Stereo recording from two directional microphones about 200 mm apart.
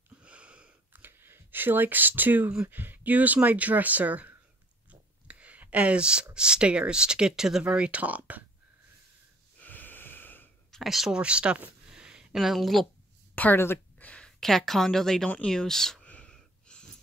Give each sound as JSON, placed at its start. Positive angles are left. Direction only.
{"t": 0.2, "sound": "speech", "side_deg": -5}
{"t": 9.6, "sound": "wheeze", "side_deg": 10}
{"t": 10.8, "sound": "speech", "side_deg": 0}
{"t": 13.3, "sound": "a sound", "side_deg": 10}